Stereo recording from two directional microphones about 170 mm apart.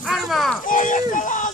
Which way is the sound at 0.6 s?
50° left (ahead or behind).